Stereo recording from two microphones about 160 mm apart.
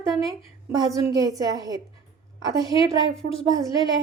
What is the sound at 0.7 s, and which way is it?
A woman's voice, 25° right (ahead or behind).